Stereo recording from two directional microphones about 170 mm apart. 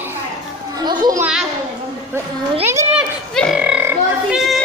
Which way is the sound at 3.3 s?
Centre (ahead or behind).